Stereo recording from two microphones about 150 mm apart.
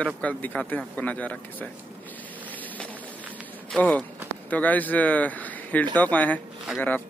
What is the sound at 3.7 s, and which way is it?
Speech, 10° left (ahead or behind).